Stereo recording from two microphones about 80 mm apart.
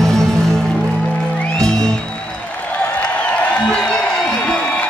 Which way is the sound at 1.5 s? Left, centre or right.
Centre.